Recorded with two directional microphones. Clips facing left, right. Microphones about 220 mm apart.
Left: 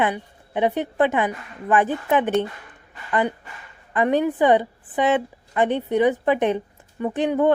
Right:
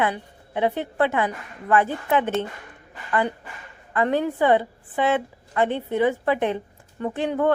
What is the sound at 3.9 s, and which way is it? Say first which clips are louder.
A woman's voice: left 2 dB; 15° left (ahead or behind).